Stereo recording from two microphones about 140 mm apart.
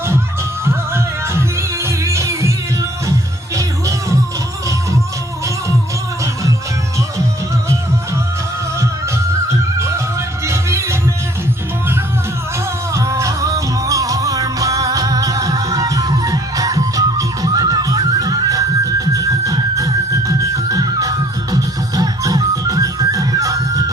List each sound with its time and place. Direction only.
0.6 s music: 20° right (ahead or behind)
9.5 s music: 20° right (ahead or behind)
12.9 s music: 20° right (ahead or behind)